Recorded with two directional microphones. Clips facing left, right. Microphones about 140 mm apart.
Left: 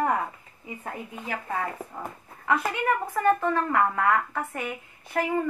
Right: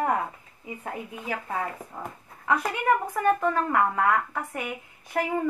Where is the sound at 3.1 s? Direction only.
15° right (ahead or behind).